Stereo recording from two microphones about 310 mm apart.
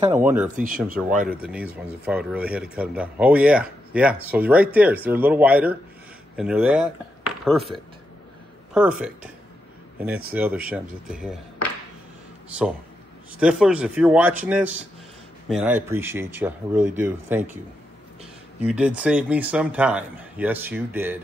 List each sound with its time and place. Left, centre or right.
0.1 s speech: centre
0.6 s speech: right
1.4 s speech: centre
8.7 s speech: centre
10.3 s speech: centre
13.4 s speech: centre
18.7 s speech: centre